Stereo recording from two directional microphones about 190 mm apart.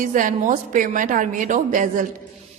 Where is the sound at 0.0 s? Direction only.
45° right (ahead or behind).